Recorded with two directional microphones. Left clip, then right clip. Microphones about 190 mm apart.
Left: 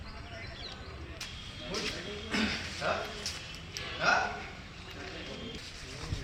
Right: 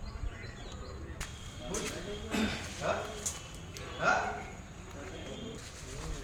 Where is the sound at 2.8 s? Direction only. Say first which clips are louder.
Left 1 dB; 50° right (ahead or behind).